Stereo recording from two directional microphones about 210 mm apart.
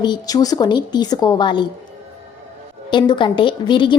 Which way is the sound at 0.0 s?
20° left (ahead or behind).